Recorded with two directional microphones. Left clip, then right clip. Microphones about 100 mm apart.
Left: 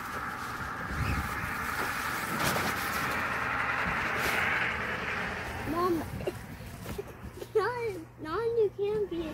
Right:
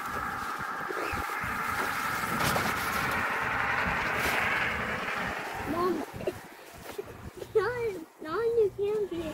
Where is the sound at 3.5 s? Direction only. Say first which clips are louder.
Right 2 dB; 20° right (ahead or behind).